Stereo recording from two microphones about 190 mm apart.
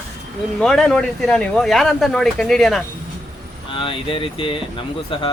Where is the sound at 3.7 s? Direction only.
25° left (ahead or behind).